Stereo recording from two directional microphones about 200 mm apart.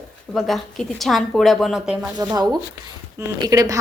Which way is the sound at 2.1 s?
20° right (ahead or behind).